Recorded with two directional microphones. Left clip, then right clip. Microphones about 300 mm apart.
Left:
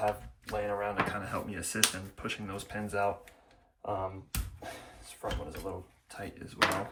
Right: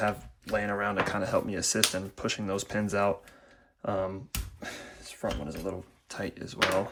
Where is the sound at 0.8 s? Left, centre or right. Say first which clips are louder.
Right 4 dB; centre.